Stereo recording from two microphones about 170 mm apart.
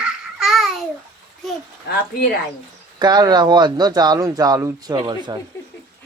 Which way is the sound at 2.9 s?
25° right (ahead or behind).